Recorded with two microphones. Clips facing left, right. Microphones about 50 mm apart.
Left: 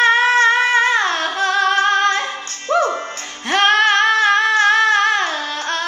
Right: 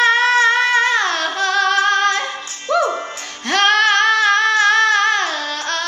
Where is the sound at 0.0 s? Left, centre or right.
Centre.